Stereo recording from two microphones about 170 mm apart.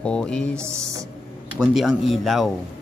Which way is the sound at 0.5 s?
15° right (ahead or behind).